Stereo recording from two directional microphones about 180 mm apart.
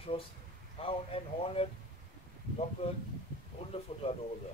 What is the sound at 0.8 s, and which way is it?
Speech, 30° left (ahead or behind).